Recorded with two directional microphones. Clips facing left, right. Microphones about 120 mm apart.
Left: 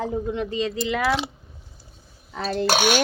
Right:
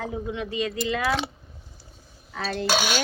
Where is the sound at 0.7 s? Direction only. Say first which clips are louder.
Left 1 dB; 20° left (ahead or behind).